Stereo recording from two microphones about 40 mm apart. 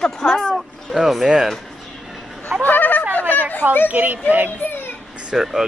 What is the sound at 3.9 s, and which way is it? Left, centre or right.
Speech, right.